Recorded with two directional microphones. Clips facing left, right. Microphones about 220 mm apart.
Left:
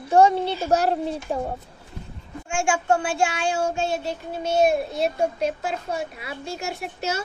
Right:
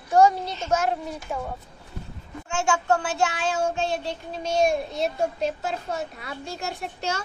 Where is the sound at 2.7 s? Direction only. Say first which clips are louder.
Left 2 dB; 25° left (ahead or behind).